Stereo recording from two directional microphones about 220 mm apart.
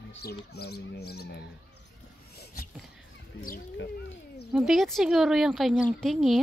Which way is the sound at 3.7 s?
55° left (ahead or behind).